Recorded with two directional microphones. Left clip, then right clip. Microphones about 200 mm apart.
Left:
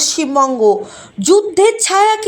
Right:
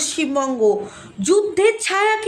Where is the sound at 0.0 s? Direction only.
20° left (ahead or behind).